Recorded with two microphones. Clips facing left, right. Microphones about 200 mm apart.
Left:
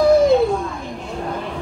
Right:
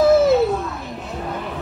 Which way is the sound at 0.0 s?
5° right (ahead or behind).